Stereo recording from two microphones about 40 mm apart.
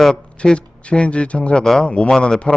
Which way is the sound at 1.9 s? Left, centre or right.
Left.